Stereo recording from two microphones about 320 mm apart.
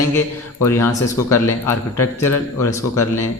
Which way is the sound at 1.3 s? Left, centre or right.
Centre.